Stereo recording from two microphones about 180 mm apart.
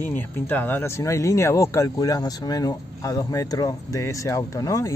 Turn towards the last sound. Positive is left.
turn(degrees=15)  # may be behind; listen again after turning